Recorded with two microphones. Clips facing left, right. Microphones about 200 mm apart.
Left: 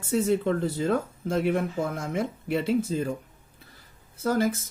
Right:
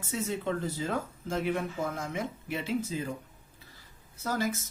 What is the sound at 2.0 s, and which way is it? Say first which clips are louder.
Speech: left 6 dB; 60° left (ahead or behind).